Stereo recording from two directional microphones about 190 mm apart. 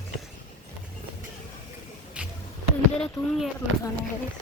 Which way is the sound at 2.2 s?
5° right (ahead or behind).